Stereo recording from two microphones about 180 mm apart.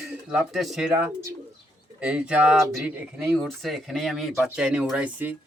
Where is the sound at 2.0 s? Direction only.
5° right (ahead or behind).